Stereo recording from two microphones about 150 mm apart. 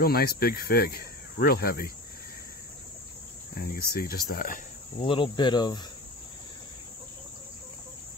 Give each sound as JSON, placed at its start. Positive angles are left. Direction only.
{"t": 0.0, "sound": "speech", "side_deg": 90}
{"t": 3.9, "sound": "speech", "side_deg": 80}
{"t": 5.0, "sound": "cricket", "side_deg": 35}